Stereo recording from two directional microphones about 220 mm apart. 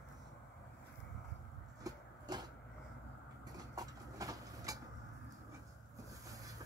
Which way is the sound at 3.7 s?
15° right (ahead or behind).